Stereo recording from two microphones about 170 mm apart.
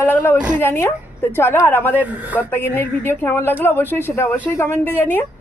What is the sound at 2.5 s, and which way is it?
A woman's voice, 10° left (ahead or behind).